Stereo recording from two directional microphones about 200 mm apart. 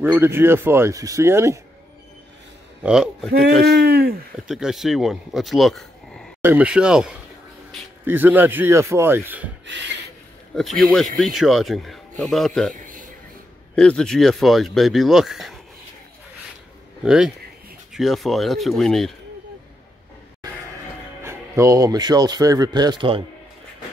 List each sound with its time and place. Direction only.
0.0 s speech: 10° right (ahead or behind)
2.8 s speech: centre (ahead or behind)
3.6 s speech: 55° right (ahead or behind)
4.5 s speech: centre (ahead or behind)
9.7 s a sound: 60° right (ahead or behind)
10.5 s speech: centre (ahead or behind)
12.7 s a sound: 45° right (ahead or behind)
13.7 s speech: 5° left (ahead or behind)
17.0 s speech: 5° right (ahead or behind)
21.2 s speech: 15° right (ahead or behind)